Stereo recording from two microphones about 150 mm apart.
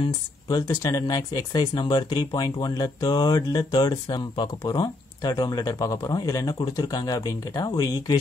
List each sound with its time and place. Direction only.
0.5 s speech: 25° left (ahead or behind)